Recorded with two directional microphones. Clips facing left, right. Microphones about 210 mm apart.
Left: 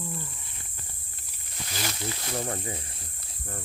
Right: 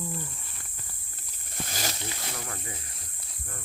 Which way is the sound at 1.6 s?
40° right (ahead or behind).